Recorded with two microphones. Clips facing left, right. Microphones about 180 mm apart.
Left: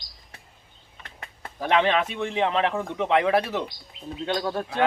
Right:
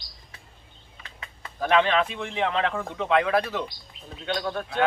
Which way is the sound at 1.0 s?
55° left (ahead or behind).